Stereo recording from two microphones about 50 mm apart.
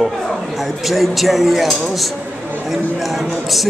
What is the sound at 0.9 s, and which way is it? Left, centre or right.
Speech, centre.